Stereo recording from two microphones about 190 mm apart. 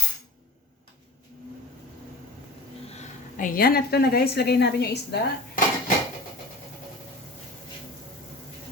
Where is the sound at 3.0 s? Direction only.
45° left (ahead or behind).